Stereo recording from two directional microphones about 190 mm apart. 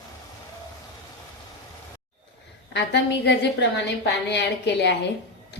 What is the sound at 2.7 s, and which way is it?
A woman's voice, 60° left (ahead or behind).